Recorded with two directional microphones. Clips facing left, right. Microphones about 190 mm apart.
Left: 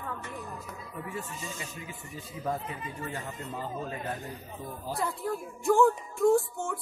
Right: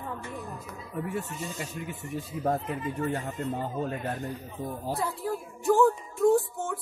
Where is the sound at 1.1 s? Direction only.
60° right (ahead or behind).